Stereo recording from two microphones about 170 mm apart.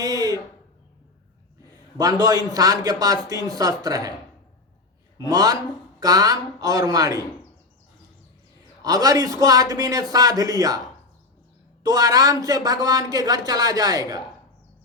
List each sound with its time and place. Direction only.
0.0 s a sound: 20° right (ahead or behind)
2.0 s speech: 20° right (ahead or behind)
5.1 s speech: 20° right (ahead or behind)
8.8 s speech: 20° right (ahead or behind)
11.8 s speech: 20° right (ahead or behind)